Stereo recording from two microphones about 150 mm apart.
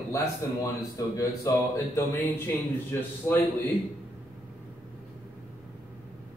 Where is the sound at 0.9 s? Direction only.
25° left (ahead or behind).